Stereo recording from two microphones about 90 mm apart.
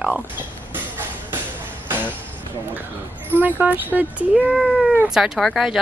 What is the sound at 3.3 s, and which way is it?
Speech, 20° right (ahead or behind).